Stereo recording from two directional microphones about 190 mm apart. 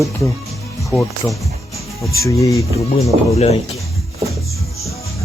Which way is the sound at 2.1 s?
15° left (ahead or behind).